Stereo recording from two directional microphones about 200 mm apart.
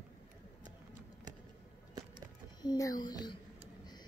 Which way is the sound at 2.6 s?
20° left (ahead or behind).